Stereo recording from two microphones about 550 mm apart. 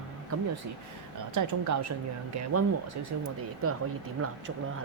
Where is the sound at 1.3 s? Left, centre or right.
Right.